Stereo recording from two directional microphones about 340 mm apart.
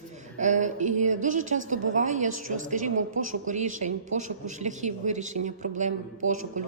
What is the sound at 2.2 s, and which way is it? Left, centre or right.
Speech, right.